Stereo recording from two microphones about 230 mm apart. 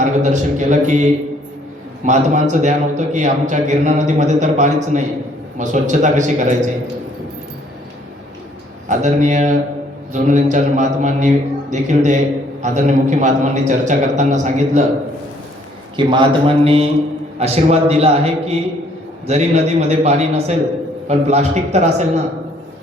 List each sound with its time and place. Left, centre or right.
0.0 s a man's voice: right
2.0 s a man's voice: right
8.9 s a man's voice: right
16.0 s a man's voice: right